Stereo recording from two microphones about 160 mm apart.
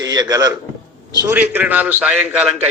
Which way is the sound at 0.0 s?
25° right (ahead or behind).